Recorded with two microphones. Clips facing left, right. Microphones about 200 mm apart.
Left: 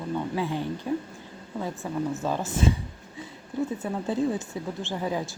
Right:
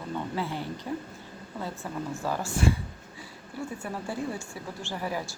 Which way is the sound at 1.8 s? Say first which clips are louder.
Left 4 dB; 15° left (ahead or behind).